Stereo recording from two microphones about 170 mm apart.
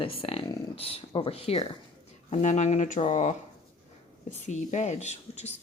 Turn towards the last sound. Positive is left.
turn(degrees=40)  # may be behind; listen again after turning